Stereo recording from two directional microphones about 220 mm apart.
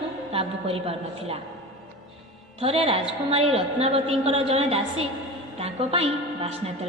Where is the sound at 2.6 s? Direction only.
25° right (ahead or behind).